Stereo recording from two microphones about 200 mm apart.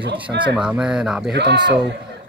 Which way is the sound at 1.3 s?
55° right (ahead or behind).